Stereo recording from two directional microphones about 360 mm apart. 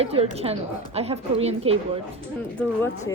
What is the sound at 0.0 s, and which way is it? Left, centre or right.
A woman's voice, centre.